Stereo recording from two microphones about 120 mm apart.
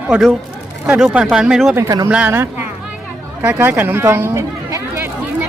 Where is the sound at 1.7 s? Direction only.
30° right (ahead or behind).